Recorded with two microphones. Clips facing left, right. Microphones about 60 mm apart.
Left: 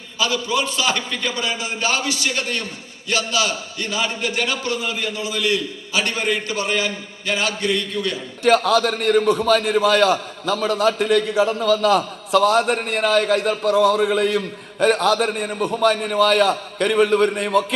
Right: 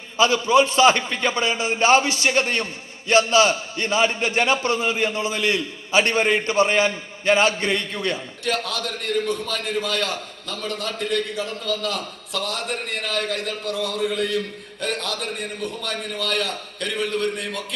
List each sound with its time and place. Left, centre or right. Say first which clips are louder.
0.2 s a man's voice: right 5 dB; right
8.4 s a man's voice: left 10 dB; left